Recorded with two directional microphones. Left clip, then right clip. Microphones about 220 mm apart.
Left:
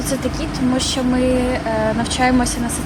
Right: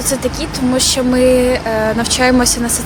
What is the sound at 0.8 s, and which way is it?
Speech, 40° right (ahead or behind).